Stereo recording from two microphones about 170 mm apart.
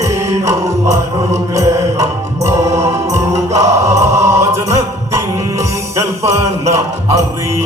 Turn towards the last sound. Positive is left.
turn(degrees=-15)  # may be behind; listen again after turning